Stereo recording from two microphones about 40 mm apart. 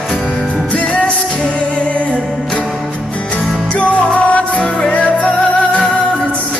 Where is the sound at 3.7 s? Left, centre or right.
Left.